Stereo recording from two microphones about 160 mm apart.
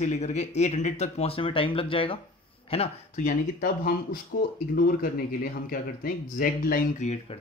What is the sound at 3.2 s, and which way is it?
Speech, 60° left (ahead or behind).